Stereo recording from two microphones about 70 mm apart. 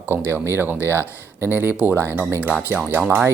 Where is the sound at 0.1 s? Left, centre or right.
Right.